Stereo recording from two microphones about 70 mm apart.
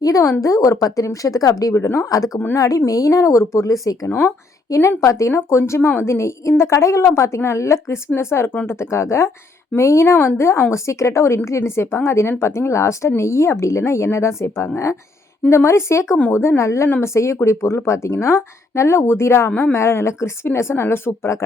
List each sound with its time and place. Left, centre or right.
0.0 s a woman's voice: left